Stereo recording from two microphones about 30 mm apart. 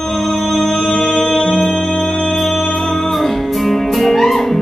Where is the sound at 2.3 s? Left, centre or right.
Centre.